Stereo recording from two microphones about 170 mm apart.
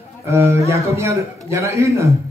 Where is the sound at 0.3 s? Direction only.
15° right (ahead or behind).